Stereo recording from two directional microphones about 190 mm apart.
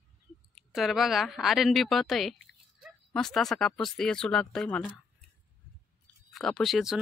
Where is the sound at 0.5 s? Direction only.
Centre (ahead or behind).